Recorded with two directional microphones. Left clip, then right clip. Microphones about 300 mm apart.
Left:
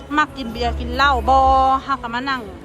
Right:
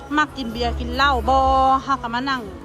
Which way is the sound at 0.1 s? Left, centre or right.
Centre.